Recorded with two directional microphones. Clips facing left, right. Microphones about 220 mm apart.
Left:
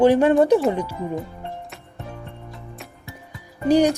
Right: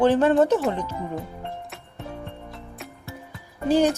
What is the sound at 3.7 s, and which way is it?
Speech, 15° left (ahead or behind).